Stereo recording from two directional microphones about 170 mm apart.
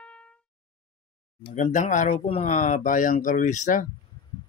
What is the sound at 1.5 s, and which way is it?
Speech, 45° left (ahead or behind).